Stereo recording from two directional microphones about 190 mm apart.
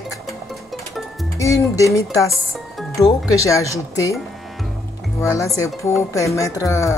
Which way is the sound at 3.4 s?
15° left (ahead or behind).